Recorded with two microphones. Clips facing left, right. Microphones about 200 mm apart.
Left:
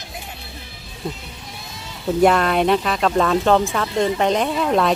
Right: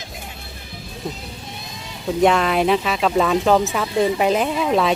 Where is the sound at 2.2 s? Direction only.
Centre (ahead or behind).